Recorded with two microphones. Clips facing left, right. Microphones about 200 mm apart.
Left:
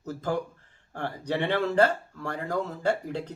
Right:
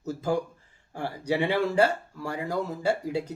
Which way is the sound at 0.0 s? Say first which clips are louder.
Right 2 dB; 10° right (ahead or behind).